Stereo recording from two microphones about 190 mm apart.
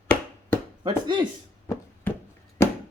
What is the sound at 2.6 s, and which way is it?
Chop, 15° left (ahead or behind).